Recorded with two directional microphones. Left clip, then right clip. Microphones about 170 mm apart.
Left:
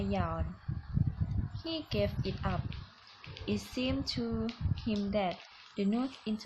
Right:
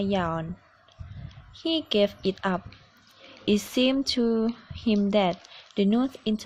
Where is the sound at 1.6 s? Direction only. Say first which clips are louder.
Right 11 dB; 50° right (ahead or behind).